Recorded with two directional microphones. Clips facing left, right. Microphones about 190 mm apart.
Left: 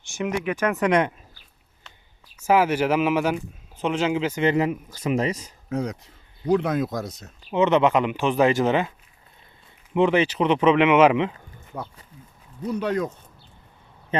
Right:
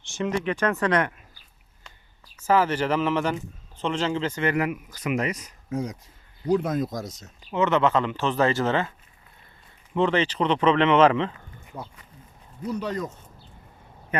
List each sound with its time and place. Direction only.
0.0 s speech: 15° left (ahead or behind)
2.3 s speech: 10° left (ahead or behind)
4.4 s speech: 25° left (ahead or behind)
5.6 s speech: 70° left (ahead or behind)
7.5 s speech: 15° left (ahead or behind)
9.9 s speech: 10° left (ahead or behind)
11.7 s speech: 70° left (ahead or behind)
14.1 s a sound: 25° left (ahead or behind)